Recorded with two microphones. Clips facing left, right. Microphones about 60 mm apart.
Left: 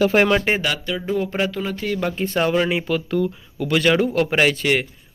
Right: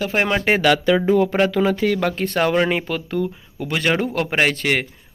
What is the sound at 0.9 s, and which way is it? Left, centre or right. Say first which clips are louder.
Speech: right 7 dB; right.